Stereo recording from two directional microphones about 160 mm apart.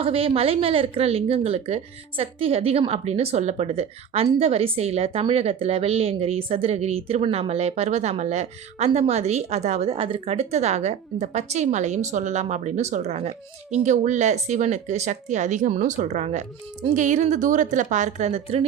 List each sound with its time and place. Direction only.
0.0 s a woman's voice: 35° right (ahead or behind)